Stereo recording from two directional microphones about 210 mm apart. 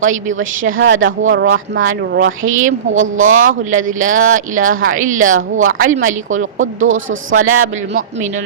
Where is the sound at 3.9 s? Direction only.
40° right (ahead or behind).